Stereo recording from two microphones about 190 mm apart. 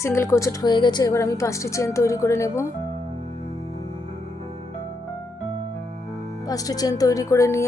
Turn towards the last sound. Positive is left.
turn(degrees=15)  # may be behind; listen again after turning